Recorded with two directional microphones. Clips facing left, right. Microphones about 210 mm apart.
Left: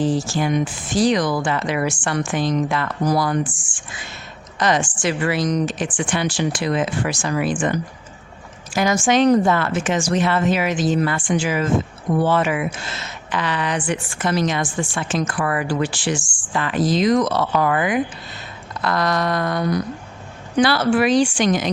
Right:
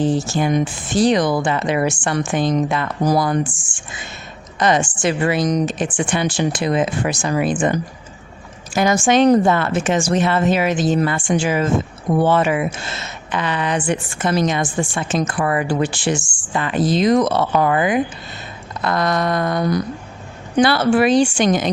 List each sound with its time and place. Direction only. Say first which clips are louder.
0.0 s speech: right 2 dB; 25° right (ahead or behind)
2.4 s speech: right 3 dB; 50° right (ahead or behind)
2.6 s speech: right 2 dB; 20° right (ahead or behind)
5.4 s speech: right 2 dB; 40° right (ahead or behind)
5.6 s speech: right 3 dB; 25° right (ahead or behind)